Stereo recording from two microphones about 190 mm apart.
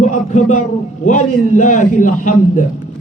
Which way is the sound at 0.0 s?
40° left (ahead or behind).